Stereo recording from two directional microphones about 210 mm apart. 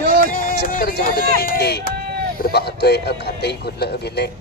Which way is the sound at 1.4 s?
50° left (ahead or behind).